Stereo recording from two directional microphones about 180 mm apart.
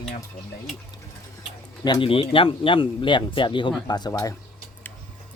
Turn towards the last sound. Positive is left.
turn(degrees=20)  # may be behind; listen again after turning